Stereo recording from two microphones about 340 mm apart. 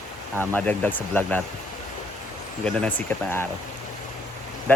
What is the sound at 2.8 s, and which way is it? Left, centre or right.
Speech, centre.